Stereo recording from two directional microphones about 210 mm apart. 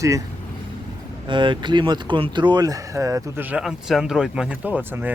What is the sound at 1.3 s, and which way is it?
Speech, 20° right (ahead or behind).